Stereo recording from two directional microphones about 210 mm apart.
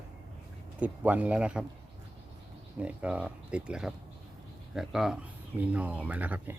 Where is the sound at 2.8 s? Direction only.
5° right (ahead or behind).